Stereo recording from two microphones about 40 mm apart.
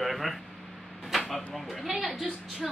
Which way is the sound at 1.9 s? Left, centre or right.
Centre.